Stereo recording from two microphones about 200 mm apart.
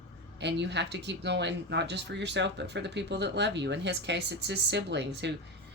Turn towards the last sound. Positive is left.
turn(degrees=-60)  # may be behind; listen again after turning